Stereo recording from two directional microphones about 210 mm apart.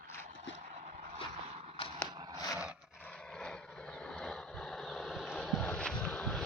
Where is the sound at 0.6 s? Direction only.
40° right (ahead or behind).